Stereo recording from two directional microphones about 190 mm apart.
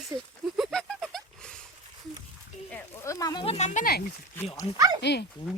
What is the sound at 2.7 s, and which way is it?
Speech, 15° left (ahead or behind).